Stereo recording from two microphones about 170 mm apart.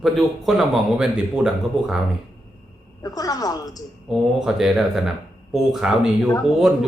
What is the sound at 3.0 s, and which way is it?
Speech, 20° left (ahead or behind).